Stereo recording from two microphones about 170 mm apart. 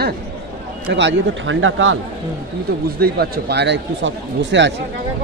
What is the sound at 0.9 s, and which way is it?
Speech, 90° right.